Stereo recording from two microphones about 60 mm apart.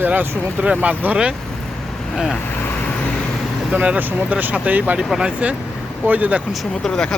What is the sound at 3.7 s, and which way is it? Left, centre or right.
Speech, right.